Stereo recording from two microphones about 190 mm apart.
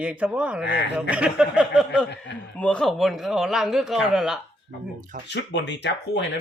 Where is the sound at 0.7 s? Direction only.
65° left (ahead or behind).